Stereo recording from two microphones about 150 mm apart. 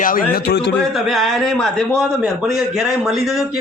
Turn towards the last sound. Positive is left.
turn(degrees=0)  # may be behind; listen again after turning